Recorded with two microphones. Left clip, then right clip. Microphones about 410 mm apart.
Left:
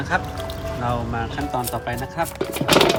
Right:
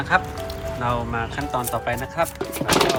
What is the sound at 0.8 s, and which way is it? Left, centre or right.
Speech, centre.